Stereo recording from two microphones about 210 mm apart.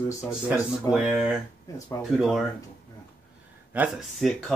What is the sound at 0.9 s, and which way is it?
Speech, 5° right (ahead or behind).